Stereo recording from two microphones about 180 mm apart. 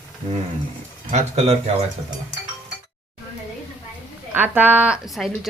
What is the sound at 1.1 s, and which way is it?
Speech, 40° right (ahead or behind).